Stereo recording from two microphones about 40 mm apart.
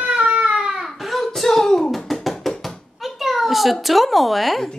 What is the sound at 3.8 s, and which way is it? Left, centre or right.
Speech, centre.